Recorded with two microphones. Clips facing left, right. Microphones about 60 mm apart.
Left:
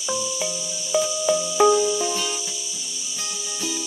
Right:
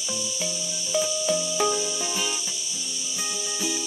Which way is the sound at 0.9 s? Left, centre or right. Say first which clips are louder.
Left 4 dB; left.